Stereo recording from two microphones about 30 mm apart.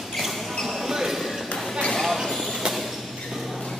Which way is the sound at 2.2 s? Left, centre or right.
Centre.